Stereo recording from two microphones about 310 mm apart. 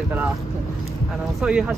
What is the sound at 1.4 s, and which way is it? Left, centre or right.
Speech, centre.